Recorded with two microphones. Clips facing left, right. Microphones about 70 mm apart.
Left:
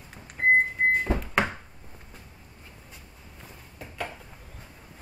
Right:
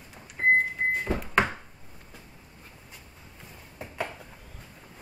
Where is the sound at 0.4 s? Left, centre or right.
Right.